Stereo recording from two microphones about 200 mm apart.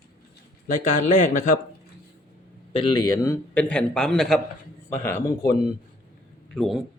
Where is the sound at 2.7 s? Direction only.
25° left (ahead or behind).